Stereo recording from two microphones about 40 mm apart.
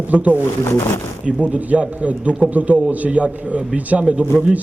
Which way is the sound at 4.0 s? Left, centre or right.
Right.